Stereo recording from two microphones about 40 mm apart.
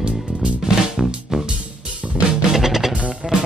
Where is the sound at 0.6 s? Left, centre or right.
Centre.